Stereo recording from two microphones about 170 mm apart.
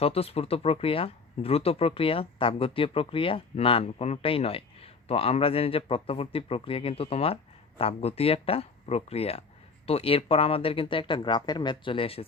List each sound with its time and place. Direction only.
0.0 s speech: 35° left (ahead or behind)